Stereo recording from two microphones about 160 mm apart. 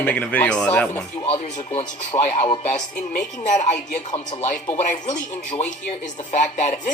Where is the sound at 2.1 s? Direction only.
25° left (ahead or behind).